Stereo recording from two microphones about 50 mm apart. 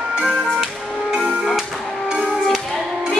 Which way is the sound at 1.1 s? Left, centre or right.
Centre.